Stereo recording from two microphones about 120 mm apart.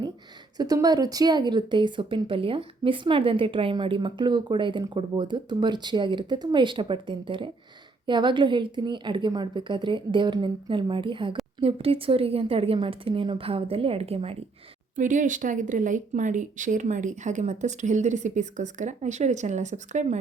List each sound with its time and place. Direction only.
0.5 s a woman's voice: 30° right (ahead or behind); by 14.3 s 55° right (ahead or behind)
14.9 s speech: 90° right